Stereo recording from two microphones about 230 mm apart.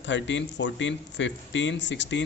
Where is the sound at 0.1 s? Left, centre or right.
Left.